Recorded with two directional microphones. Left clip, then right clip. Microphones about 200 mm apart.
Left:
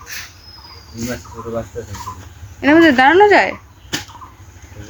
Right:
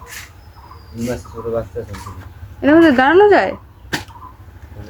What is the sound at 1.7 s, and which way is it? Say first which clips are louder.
Speech: right 2 dB; 35° left (ahead or behind).